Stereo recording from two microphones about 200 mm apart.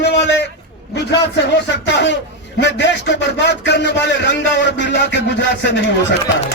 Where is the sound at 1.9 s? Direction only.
60° left (ahead or behind).